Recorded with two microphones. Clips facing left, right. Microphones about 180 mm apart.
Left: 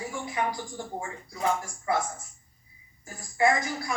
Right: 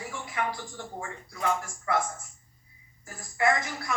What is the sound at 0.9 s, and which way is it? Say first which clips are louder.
Speech: left 1 dB; 25° left (ahead or behind).